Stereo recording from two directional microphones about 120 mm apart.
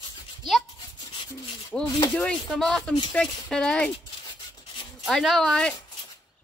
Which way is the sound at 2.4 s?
Centre (ahead or behind).